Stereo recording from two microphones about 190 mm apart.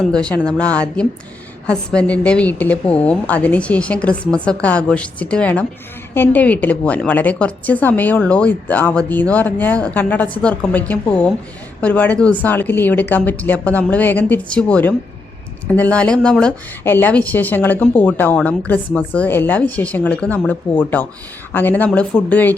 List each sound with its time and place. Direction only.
0.0 s a woman's voice: 5° left (ahead or behind)